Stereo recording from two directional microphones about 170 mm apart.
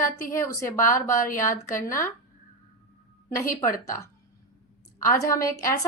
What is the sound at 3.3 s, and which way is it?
A woman's voice, 15° left (ahead or behind).